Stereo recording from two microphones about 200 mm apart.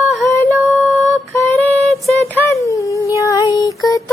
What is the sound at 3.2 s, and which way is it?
Female singing, 15° left (ahead or behind).